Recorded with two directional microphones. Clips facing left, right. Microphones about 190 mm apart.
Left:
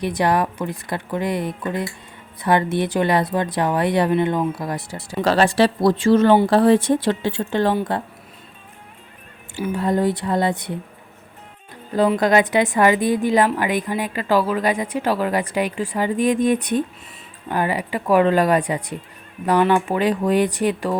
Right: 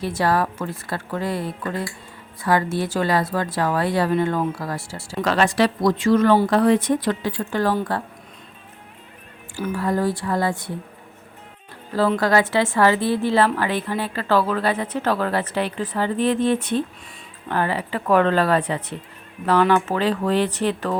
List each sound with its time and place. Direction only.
0.0 s a woman's voice: 15° left (ahead or behind)
5.2 s a woman's voice: 30° left (ahead or behind)
9.7 s a woman's voice: 20° left (ahead or behind)
11.9 s a woman's voice: 20° left (ahead or behind)